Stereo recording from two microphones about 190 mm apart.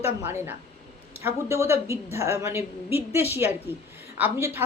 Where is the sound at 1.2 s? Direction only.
15° right (ahead or behind).